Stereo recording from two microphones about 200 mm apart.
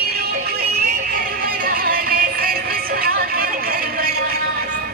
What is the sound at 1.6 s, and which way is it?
Music, 45° right (ahead or behind).